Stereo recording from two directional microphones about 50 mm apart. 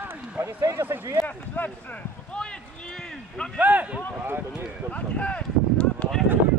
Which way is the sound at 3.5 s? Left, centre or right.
Right.